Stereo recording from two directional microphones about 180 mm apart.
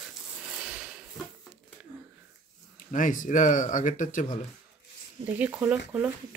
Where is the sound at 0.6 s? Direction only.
5° right (ahead or behind).